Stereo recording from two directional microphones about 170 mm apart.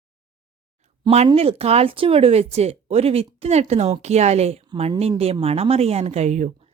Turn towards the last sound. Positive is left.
turn(degrees=-40)  # may be behind; listen again after turning